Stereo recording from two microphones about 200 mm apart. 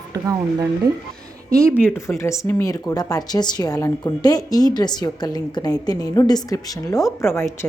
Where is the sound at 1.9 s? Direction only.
15° left (ahead or behind).